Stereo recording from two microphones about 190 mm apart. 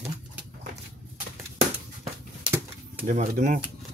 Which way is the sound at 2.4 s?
10° right (ahead or behind).